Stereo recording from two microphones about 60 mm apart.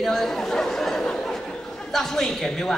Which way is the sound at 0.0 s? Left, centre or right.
Centre.